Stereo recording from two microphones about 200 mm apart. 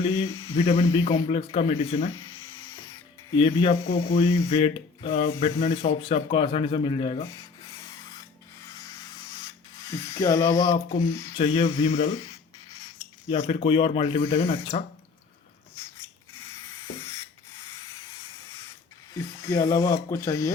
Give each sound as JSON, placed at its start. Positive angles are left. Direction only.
{"t": 0.0, "sound": "speech", "side_deg": 25}
{"t": 3.3, "sound": "speech", "side_deg": 25}
{"t": 9.9, "sound": "speech", "side_deg": 15}
{"t": 11.3, "sound": "speech", "side_deg": 30}
{"t": 12.0, "sound": "speech", "side_deg": 15}
{"t": 13.2, "sound": "speech", "side_deg": 30}
{"t": 19.1, "sound": "speech", "side_deg": 15}